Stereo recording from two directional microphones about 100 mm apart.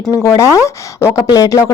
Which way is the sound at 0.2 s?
30° left (ahead or behind).